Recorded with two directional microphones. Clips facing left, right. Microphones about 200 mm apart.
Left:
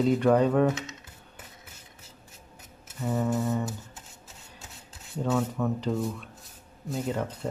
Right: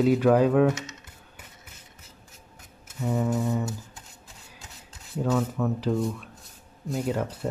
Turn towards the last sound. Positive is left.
turn(degrees=-5)  # may be behind; listen again after turning